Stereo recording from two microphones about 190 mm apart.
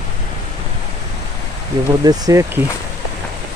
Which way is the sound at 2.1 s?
15° right (ahead or behind).